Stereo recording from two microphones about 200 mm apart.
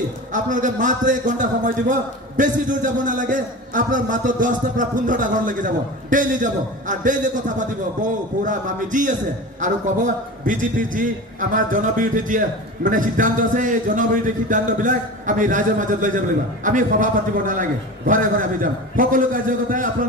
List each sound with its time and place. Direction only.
0.3 s a man's voice: 40° right (ahead or behind)